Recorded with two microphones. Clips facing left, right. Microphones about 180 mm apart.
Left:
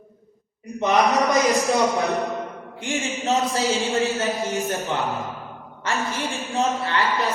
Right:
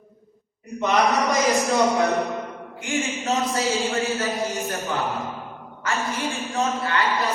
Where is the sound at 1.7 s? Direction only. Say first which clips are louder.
Right 1 dB; 15° left (ahead or behind).